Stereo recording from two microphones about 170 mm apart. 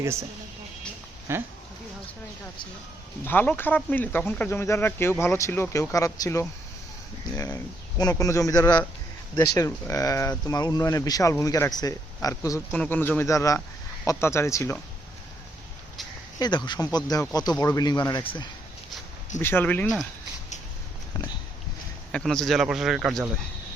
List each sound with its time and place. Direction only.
0.0 s speech: 15° right (ahead or behind)
1.3 s speech: 15° right (ahead or behind)
3.2 s speech: 10° left (ahead or behind)
16.4 s speech: 25° left (ahead or behind)
19.4 s speech: 10° left (ahead or behind)
22.1 s speech: 5° left (ahead or behind)